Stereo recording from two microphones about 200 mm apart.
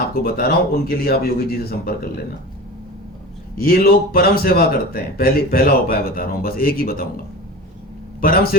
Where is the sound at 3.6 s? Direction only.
50° left (ahead or behind).